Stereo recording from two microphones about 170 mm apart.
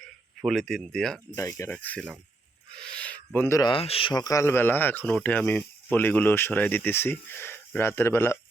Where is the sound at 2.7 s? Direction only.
5° left (ahead or behind).